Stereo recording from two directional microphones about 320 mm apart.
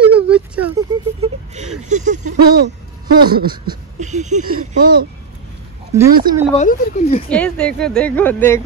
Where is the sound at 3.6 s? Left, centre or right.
Right.